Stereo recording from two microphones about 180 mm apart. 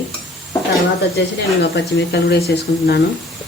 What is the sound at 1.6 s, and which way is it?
Speech, 70° left (ahead or behind).